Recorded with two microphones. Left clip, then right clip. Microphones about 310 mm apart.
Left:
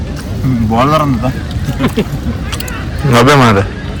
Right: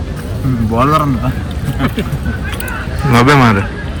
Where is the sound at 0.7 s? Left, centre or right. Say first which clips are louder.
Left 1 dB; centre.